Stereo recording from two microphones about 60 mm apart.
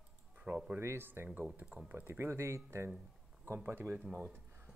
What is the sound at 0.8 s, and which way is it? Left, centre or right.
Speech, right.